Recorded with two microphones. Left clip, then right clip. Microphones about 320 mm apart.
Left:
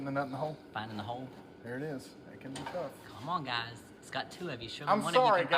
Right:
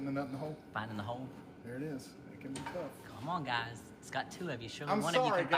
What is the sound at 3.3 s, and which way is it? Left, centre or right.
Speech, centre.